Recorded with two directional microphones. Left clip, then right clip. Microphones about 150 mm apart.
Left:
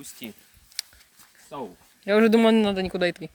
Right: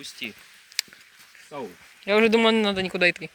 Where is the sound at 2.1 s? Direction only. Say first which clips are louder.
Even; 45° left (ahead or behind).